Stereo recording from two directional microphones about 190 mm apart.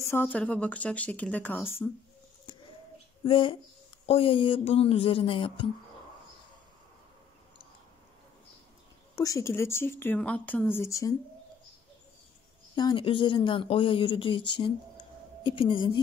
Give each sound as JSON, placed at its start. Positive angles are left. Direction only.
{"t": 0.0, "sound": "speech", "side_deg": 10}
{"t": 2.5, "sound": "bird", "side_deg": 20}
{"t": 3.3, "sound": "speech", "side_deg": 30}
{"t": 9.1, "sound": "speech", "side_deg": 20}
{"t": 12.7, "sound": "speech", "side_deg": 25}
{"t": 14.6, "sound": "a sound", "side_deg": 25}